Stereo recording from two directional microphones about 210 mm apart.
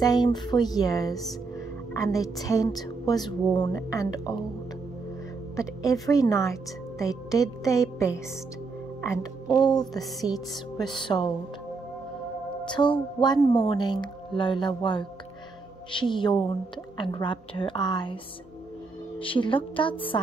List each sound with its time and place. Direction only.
0.0 s speech: 20° left (ahead or behind)
5.6 s speech: 15° left (ahead or behind)
10.3 s music: 5° right (ahead or behind)
10.8 s speech: 20° left (ahead or behind)
12.6 s speech: 20° left (ahead or behind)